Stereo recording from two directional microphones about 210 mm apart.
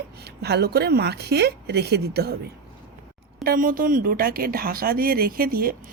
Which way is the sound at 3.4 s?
45° right (ahead or behind).